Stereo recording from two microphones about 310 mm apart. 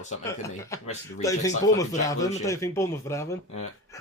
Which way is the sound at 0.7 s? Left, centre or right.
Centre.